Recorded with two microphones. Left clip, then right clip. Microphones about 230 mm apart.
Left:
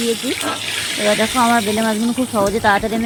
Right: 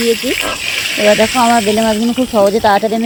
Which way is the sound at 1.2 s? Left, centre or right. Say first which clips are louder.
Right 5 dB; right.